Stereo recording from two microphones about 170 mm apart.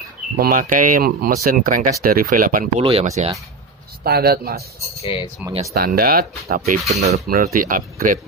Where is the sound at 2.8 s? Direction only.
35° right (ahead or behind).